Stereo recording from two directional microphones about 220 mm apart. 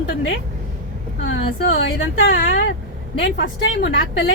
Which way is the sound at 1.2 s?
60° left (ahead or behind).